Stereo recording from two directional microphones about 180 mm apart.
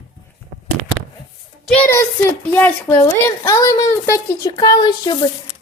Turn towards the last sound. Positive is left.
turn(degrees=25)  # may be behind; listen again after turning